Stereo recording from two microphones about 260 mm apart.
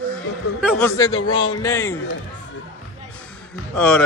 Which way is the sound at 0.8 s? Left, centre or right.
Centre.